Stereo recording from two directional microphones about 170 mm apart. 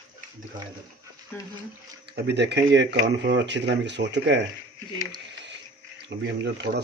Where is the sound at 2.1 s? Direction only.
75° right (ahead or behind).